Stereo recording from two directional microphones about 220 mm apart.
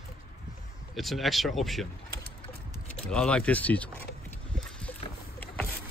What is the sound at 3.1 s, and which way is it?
Speech, 5° left (ahead or behind).